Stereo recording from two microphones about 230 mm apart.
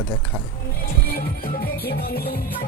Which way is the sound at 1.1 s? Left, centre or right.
Left.